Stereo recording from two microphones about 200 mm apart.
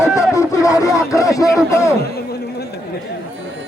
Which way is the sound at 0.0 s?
15° left (ahead or behind).